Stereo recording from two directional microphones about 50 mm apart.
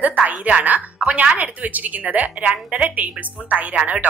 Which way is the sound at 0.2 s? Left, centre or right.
Right.